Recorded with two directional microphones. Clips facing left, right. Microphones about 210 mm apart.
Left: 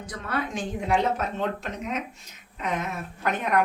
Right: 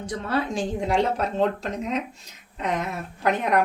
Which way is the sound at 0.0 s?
30° right (ahead or behind).